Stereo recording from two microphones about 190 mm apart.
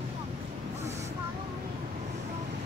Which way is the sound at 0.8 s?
35° right (ahead or behind).